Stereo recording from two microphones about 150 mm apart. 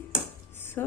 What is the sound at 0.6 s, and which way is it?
Music, 15° left (ahead or behind).